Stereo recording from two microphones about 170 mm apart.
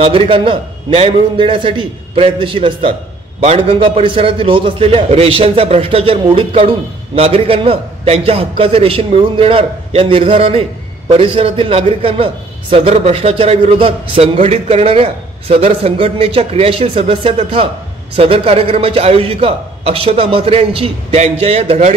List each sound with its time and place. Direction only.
0.0 s a man's voice: 30° right (ahead or behind)